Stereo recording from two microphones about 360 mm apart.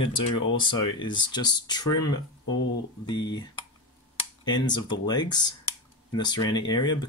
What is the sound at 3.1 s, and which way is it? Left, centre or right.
Speech, centre.